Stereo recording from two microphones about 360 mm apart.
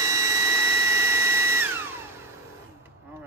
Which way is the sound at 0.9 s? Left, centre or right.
Centre.